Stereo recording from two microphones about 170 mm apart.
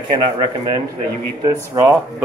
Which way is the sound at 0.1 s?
25° right (ahead or behind).